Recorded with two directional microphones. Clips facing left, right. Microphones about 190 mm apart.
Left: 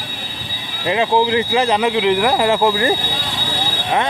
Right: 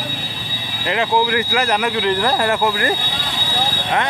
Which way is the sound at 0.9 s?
20° left (ahead or behind).